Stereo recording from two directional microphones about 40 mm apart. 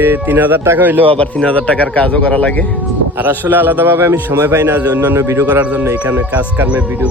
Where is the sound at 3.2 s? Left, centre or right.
Right.